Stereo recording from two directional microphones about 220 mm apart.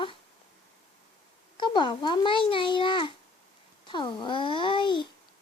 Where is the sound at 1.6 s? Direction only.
20° left (ahead or behind).